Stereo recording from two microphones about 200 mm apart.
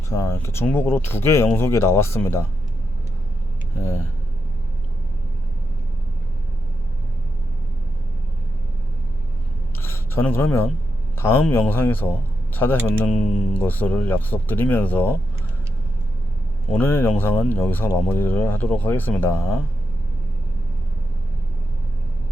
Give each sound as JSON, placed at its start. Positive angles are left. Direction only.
{"t": 0.1, "sound": "speech", "side_deg": 15}
{"t": 9.8, "sound": "speech", "side_deg": 10}
{"t": 13.3, "sound": "speech", "side_deg": 35}
{"t": 13.6, "sound": "speech", "side_deg": 10}
{"t": 16.7, "sound": "speech", "side_deg": 10}